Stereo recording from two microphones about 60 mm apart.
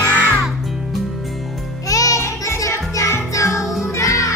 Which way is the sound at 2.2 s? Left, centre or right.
Left.